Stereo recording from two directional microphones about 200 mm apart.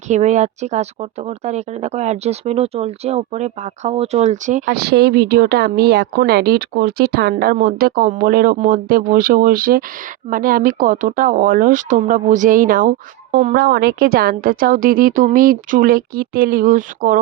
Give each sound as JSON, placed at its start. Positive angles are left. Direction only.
{"t": 0.1, "sound": "speech", "side_deg": -35}
{"t": 4.6, "sound": "a woman's voice", "side_deg": -55}